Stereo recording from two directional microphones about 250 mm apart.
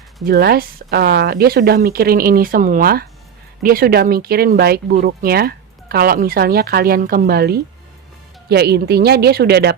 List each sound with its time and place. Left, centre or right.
0.3 s speech: right